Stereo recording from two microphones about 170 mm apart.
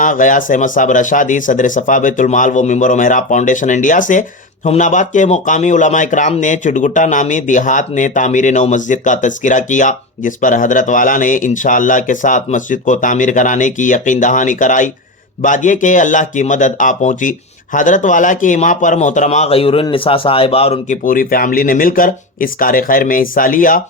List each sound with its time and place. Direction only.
0.0 s speech: 50° left (ahead or behind)
21.0 s speech: 55° left (ahead or behind)